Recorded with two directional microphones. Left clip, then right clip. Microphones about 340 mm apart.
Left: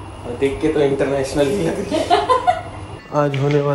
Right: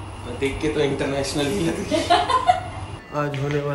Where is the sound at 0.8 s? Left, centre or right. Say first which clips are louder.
Left 5 dB; centre.